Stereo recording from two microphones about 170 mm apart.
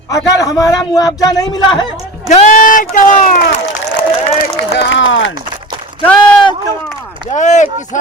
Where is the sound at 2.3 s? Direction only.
45° left (ahead or behind).